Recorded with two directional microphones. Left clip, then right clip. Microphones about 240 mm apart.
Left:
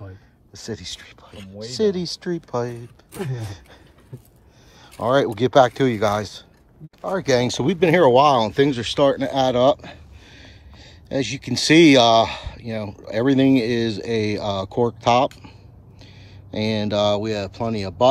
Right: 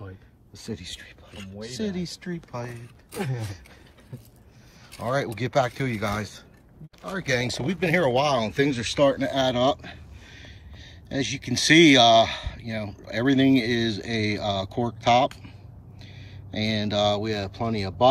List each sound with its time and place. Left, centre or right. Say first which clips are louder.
0.6 s speech: left 5 dB; centre
1.3 s speech: left 5 dB; left
1.8 s speech: left 12 dB; centre
4.9 s speech: left 8 dB; centre